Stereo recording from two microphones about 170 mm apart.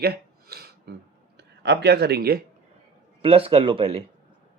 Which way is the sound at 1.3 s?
85° right.